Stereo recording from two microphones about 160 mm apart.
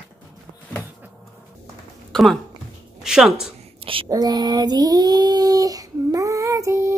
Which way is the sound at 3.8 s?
35° right (ahead or behind).